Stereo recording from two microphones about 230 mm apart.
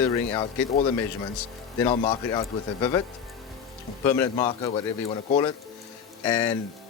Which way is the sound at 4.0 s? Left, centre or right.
Centre.